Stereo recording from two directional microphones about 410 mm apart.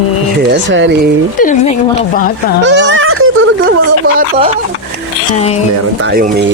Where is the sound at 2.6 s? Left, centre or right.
Right.